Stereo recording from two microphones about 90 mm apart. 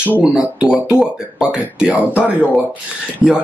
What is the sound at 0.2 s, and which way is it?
Speech, 10° right (ahead or behind).